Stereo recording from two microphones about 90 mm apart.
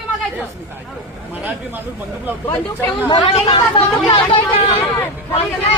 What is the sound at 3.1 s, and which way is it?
Speech, 55° left (ahead or behind).